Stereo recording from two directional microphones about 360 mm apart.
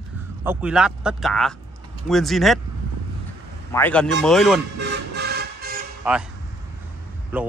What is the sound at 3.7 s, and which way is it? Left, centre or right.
Speech, centre.